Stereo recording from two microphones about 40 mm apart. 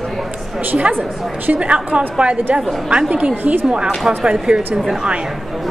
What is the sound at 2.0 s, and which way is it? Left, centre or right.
A woman's voice, right.